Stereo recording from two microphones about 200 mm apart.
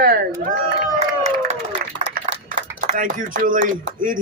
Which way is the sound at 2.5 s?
40° right (ahead or behind).